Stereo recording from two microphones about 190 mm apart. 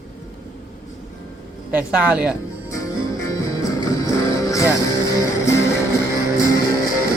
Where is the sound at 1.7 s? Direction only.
5° right (ahead or behind).